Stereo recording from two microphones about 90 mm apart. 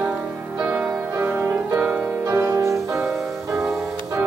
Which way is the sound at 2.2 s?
30° right (ahead or behind).